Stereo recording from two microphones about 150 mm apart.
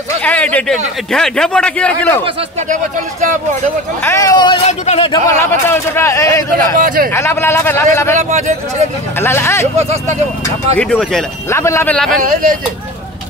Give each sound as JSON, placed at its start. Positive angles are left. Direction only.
{"t": 0.2, "sound": "a man's voice", "side_deg": 10}
{"t": 4.0, "sound": "speech", "side_deg": 20}
{"t": 4.6, "sound": "speech", "side_deg": 45}
{"t": 5.4, "sound": "speech", "side_deg": 15}
{"t": 6.8, "sound": "speech", "side_deg": -70}
{"t": 7.1, "sound": "a man's voice", "side_deg": 15}
{"t": 8.2, "sound": "speech", "side_deg": -50}
{"t": 9.2, "sound": "a man's voice", "side_deg": 15}
{"t": 10.8, "sound": "speech", "side_deg": 5}
{"t": 11.4, "sound": "a man's voice", "side_deg": 20}
{"t": 11.9, "sound": "speech", "side_deg": 5}
{"t": 12.2, "sound": "speech", "side_deg": -65}